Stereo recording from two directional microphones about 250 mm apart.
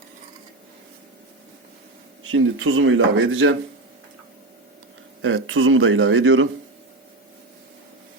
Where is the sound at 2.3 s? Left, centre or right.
Right.